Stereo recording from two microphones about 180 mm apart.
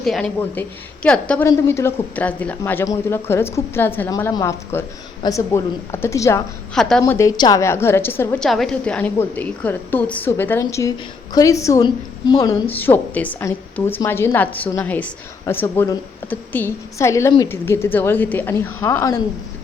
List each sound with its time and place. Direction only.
0.0 s a woman's voice: 5° left (ahead or behind)
6.7 s speech: 5° left (ahead or behind)
7.0 s a woman's voice: 15° left (ahead or behind)